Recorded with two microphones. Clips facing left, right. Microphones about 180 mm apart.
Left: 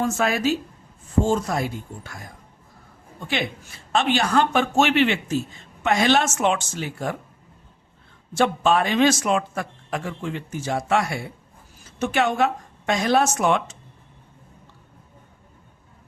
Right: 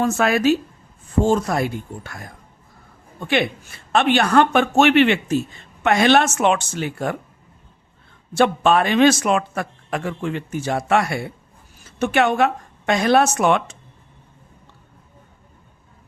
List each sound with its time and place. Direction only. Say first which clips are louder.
0.0 s speech: right 4 dB; 65° right (ahead or behind)
3.2 s speech: right 6 dB; 60° right (ahead or behind)
8.3 s speech: right 3 dB; 65° right (ahead or behind)